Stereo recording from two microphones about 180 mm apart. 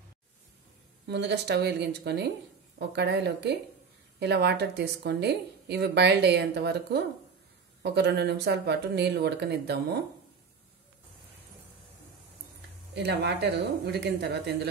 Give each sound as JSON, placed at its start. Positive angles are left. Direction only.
{"t": 1.0, "sound": "a woman's voice", "side_deg": -70}
{"t": 12.9, "sound": "a woman's voice", "side_deg": -70}